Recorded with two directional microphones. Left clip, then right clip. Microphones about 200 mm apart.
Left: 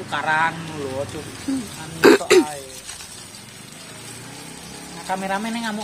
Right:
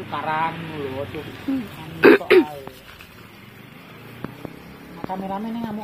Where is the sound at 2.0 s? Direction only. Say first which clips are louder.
Even; 10° left (ahead or behind).